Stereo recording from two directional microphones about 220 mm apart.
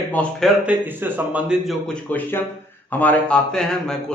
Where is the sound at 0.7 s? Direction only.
10° right (ahead or behind).